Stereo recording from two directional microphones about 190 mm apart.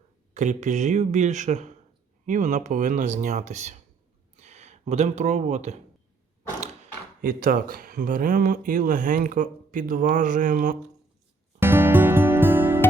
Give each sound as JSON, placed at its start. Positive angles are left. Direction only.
{"t": 0.3, "sound": "speech", "side_deg": -40}
{"t": 7.2, "sound": "speech", "side_deg": -50}
{"t": 11.6, "sound": "music", "side_deg": -10}